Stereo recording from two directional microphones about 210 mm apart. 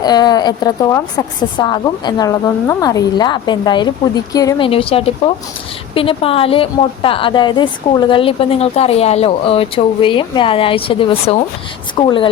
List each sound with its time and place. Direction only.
0.0 s a woman's voice: 20° left (ahead or behind)